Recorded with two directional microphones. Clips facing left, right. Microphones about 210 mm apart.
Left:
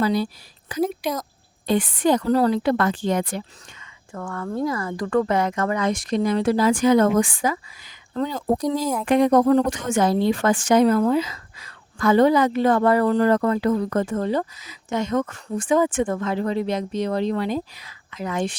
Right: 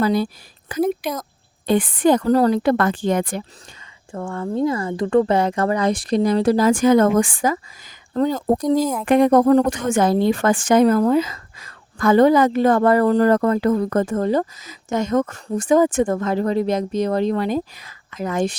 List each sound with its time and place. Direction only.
0.0 s a woman's voice: 50° right (ahead or behind)
4.1 s a woman's voice: 25° right (ahead or behind); by 18.5 s 45° right (ahead or behind)